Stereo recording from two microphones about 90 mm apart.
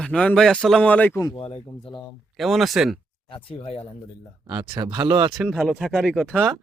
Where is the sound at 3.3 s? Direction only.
80° left.